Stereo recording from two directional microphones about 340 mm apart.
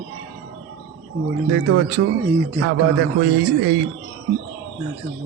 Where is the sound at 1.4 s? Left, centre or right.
Right.